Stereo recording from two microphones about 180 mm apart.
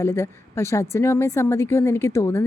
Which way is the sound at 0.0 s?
15° left (ahead or behind).